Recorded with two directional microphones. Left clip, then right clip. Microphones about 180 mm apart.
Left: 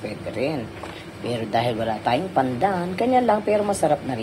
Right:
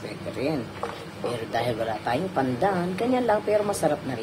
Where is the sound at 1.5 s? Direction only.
15° left (ahead or behind).